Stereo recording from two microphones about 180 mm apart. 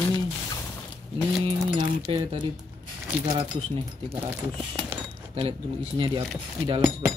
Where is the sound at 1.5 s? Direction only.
30° right (ahead or behind).